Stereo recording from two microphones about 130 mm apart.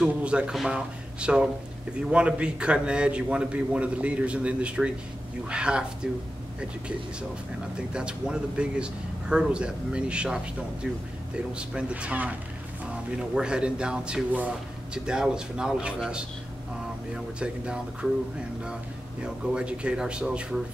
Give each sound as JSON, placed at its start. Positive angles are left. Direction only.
{"t": 0.0, "sound": "a man's voice", "side_deg": -10}
{"t": 7.9, "sound": "a man's voice", "side_deg": -10}
{"t": 19.2, "sound": "a man's voice", "side_deg": -10}